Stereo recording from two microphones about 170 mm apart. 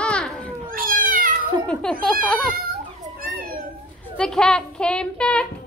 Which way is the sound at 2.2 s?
Centre (ahead or behind).